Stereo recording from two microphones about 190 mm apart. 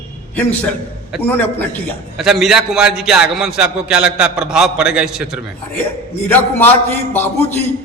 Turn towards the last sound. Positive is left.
turn(degrees=10)  # may be behind; listen again after turning